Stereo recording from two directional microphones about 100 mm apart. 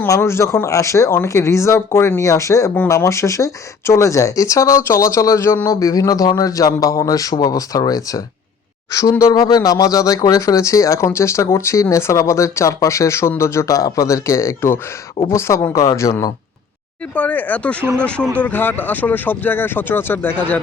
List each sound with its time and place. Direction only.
0.2 s speech: 25° left (ahead or behind)
17.2 s speech: 15° left (ahead or behind)